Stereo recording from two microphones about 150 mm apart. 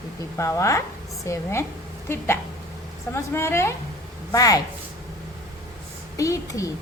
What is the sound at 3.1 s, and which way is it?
A woman's voice, 15° left (ahead or behind).